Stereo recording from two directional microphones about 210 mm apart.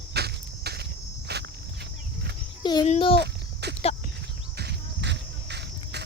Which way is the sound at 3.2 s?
50° right (ahead or behind).